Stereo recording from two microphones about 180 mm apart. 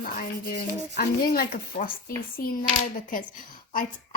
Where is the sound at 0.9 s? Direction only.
55° left (ahead or behind).